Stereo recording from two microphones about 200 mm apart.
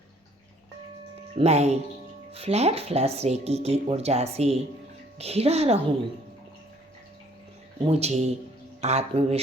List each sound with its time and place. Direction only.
1.4 s speech: 35° right (ahead or behind)
7.9 s speech: 30° right (ahead or behind)